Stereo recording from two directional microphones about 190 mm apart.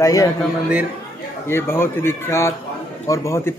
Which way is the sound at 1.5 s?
10° left (ahead or behind).